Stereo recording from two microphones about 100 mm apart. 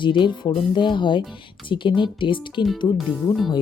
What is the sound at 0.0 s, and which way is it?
Speech, 50° left (ahead or behind).